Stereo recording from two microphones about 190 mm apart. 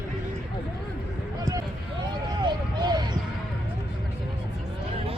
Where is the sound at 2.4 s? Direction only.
20° right (ahead or behind).